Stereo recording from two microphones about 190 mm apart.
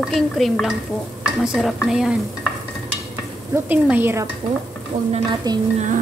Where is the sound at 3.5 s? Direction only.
10° right (ahead or behind).